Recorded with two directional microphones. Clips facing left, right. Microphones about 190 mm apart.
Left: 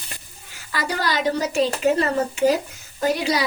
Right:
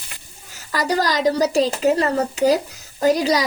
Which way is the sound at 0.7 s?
40° right (ahead or behind).